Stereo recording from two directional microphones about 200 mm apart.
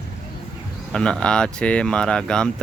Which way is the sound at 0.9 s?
5° left (ahead or behind).